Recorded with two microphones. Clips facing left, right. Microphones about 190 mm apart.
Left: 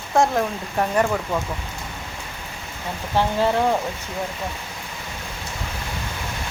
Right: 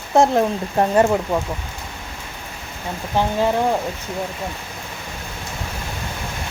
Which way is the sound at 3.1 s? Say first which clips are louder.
Right 1 dB; 15° right (ahead or behind).